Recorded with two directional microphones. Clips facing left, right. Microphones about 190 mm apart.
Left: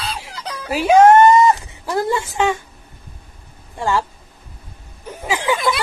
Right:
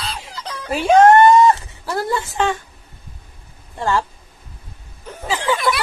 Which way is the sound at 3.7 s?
15° left (ahead or behind).